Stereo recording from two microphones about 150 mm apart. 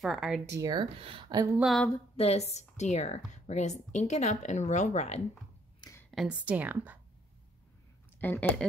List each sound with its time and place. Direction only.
0.0 s speech: centre (ahead or behind)
0.5 s speech: 25° right (ahead or behind)
1.6 s speech: centre (ahead or behind)
2.1 s speech: 45° left (ahead or behind)
5.8 s a sound: 20° left (ahead or behind)
6.1 s speech: 10° right (ahead or behind)
8.2 s a woman's voice: 10° left (ahead or behind)